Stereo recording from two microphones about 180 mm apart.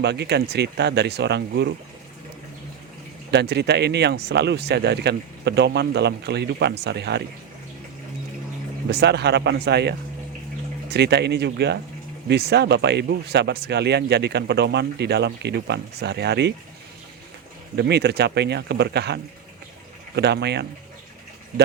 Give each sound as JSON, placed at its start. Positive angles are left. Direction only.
{"t": 0.0, "sound": "speech", "side_deg": -70}
{"t": 3.3, "sound": "speech", "side_deg": -65}
{"t": 8.9, "sound": "speech", "side_deg": -70}
{"t": 10.9, "sound": "speech", "side_deg": -65}
{"t": 17.7, "sound": "speech", "side_deg": -65}